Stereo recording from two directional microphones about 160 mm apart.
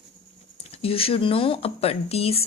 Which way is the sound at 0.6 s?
35° left (ahead or behind).